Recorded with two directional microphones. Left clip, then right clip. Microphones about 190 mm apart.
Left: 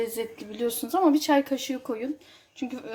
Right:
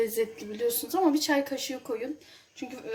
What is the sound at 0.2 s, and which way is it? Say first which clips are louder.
A woman's voice: right 1 dB; 45° left (ahead or behind).